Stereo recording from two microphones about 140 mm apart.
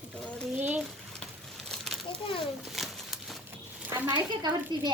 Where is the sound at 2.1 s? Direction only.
40° left (ahead or behind).